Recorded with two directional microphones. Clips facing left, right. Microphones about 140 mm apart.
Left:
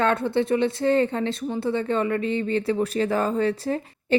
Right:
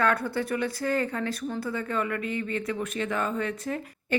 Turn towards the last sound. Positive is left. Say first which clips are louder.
# left 6 dB
turn(degrees=30)  # may be behind; listen again after turning